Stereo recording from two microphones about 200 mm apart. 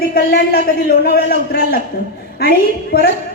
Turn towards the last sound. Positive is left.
turn(degrees=50)  # may be behind; listen again after turning